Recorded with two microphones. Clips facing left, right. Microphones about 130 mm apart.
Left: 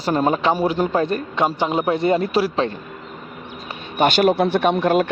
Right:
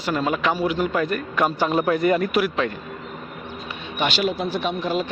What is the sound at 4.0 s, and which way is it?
Speech, 50° left (ahead or behind).